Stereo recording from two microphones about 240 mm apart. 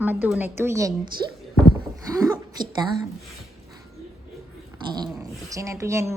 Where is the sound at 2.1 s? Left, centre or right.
Centre.